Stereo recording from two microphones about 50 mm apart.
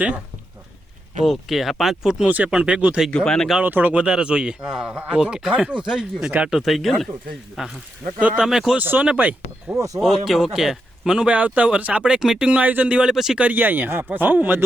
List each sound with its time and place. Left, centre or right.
1.2 s a man's voice: centre
2.2 s speech: right
3.1 s speech: centre
3.6 s speech: right; by 6.3 s centre
6.5 s a man's voice: centre
8.8 s speech: right
9.7 s speech: right
10.0 s a man's voice: centre
11.2 s speech: right
12.2 s speech: centre
12.5 s speech: right
13.4 s speech: right